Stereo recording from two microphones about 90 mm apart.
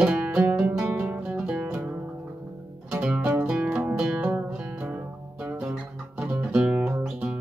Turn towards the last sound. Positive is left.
turn(degrees=-15)  # may be behind; listen again after turning